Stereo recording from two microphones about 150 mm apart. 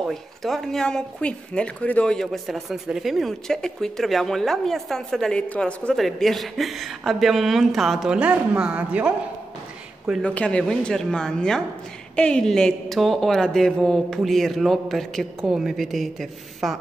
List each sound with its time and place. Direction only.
0.0 s speech: centre (ahead or behind)
10.2 s speech: 5° left (ahead or behind)